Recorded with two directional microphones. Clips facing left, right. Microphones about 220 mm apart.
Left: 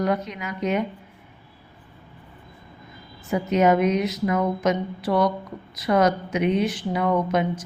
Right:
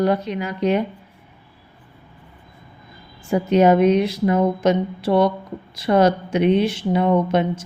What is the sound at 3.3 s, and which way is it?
A woman's voice, 30° right (ahead or behind).